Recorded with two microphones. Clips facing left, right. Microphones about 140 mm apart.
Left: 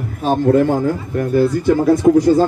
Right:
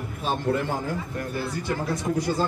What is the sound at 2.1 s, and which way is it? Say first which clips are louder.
Speech: left 15 dB; 65° left (ahead or behind).